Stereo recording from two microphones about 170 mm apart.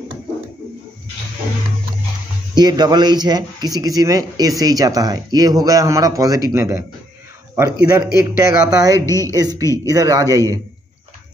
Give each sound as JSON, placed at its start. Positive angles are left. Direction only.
{"t": 2.5, "sound": "a man's voice", "side_deg": -25}
{"t": 7.9, "sound": "a man's voice", "side_deg": -20}